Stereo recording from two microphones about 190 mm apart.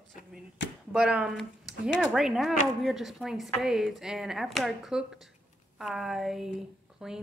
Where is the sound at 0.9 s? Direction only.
5° right (ahead or behind).